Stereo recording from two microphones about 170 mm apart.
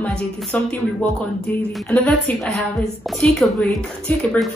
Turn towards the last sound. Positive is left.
turn(degrees=0)  # may be behind; listen again after turning